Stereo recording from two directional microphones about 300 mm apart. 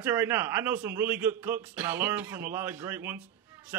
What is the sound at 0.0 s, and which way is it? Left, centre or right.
A man's voice, centre.